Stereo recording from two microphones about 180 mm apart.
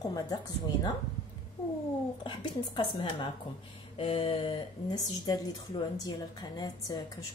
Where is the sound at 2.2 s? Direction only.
25° left (ahead or behind).